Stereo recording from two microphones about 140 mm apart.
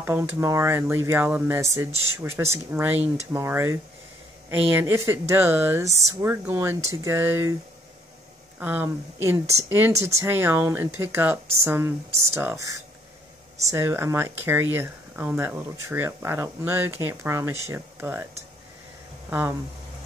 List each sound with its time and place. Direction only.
0.0 s speech: 15° right (ahead or behind)
8.5 s speech: 15° right (ahead or behind)